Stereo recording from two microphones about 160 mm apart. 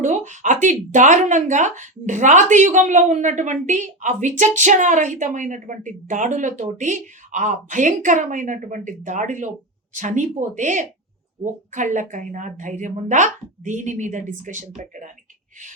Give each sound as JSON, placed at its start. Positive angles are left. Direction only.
{"t": 0.0, "sound": "speech", "side_deg": -45}